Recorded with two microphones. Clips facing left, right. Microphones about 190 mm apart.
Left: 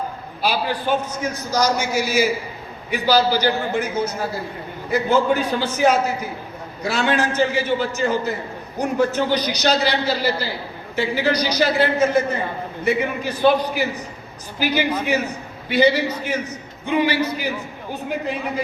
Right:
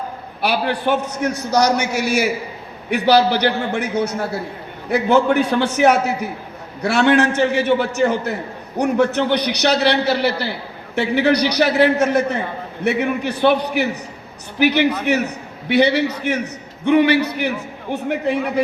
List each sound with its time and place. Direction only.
0.4 s a man's voice: 65° right (ahead or behind)